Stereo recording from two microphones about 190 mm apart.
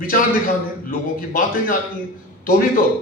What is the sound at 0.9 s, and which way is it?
Speech, 50° left (ahead or behind).